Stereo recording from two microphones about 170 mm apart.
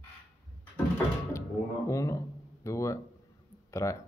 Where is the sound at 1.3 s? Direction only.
15° left (ahead or behind).